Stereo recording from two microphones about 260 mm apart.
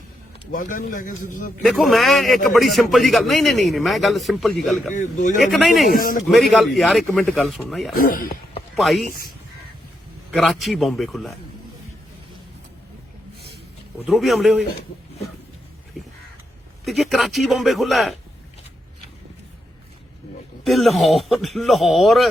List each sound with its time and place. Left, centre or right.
0.5 s a man's voice: left
1.6 s a man's voice: centre
4.9 s speech: left
5.4 s a man's voice: centre
5.9 s a man's voice: left
6.2 s a man's voice: centre
7.9 s speech: left
8.7 s speech: centre
9.0 s a man's voice: left
10.3 s a man's voice: centre
14.1 s a man's voice: centre
16.8 s a man's voice: centre
20.7 s a man's voice: centre